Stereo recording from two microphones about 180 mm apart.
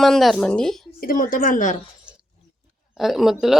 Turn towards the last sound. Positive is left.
turn(degrees=0)  # may be behind; listen again after turning